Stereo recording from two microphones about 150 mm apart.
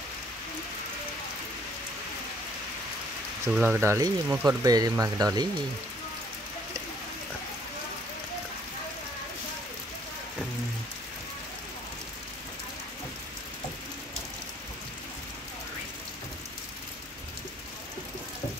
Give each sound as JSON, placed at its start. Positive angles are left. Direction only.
{"t": 3.4, "sound": "speech", "side_deg": -10}